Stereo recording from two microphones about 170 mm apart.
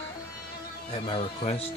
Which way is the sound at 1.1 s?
35° left (ahead or behind).